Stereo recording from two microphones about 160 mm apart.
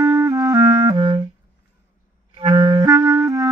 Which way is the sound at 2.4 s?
30° right (ahead or behind).